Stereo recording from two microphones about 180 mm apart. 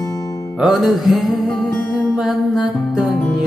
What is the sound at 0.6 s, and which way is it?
Music, centre (ahead or behind).